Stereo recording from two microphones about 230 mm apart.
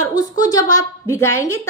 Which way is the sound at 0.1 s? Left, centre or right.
Centre.